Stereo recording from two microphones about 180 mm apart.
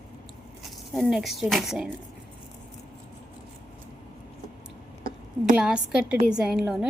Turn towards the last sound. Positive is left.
turn(degrees=-5)  # may be behind; listen again after turning